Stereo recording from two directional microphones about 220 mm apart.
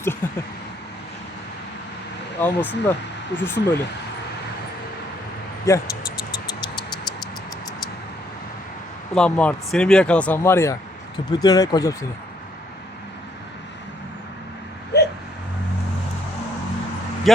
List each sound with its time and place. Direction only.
0.0 s speech: 10° left (ahead or behind)
2.4 s speech: 10° left (ahead or behind)
5.7 s speech: 15° left (ahead or behind)
9.1 s speech: 5° left (ahead or behind)
14.9 s a sound: 50° left (ahead or behind)
17.3 s speech: centre (ahead or behind)